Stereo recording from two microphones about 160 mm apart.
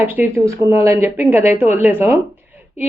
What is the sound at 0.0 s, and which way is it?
A woman's voice, 10° right (ahead or behind).